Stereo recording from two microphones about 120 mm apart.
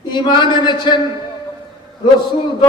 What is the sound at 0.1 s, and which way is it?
Speech, 40° left (ahead or behind).